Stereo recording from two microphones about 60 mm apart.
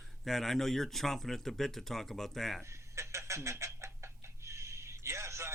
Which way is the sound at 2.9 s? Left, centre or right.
Right.